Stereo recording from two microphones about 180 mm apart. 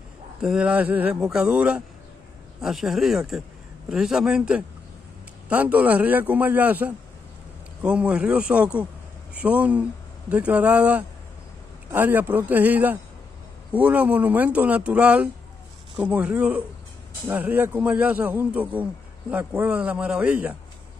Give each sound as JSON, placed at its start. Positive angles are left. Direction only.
{"t": 0.4, "sound": "a man's voice", "side_deg": -5}